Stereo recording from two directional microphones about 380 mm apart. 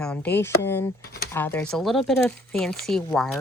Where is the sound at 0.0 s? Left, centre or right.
Centre.